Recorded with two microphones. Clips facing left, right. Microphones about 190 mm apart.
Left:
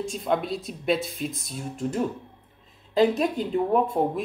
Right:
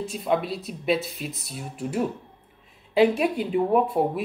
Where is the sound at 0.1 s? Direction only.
5° right (ahead or behind).